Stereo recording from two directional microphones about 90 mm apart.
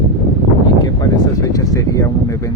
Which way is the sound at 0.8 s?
45° left (ahead or behind).